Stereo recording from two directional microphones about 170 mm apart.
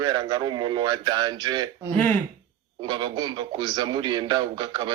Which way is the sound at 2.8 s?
25° right (ahead or behind).